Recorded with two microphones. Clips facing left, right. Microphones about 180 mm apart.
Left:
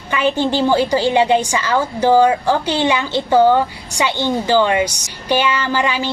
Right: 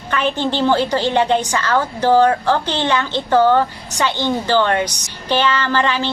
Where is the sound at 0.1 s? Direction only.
10° left (ahead or behind).